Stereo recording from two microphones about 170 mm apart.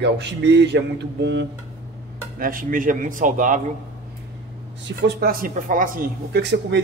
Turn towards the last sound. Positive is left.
turn(degrees=-90)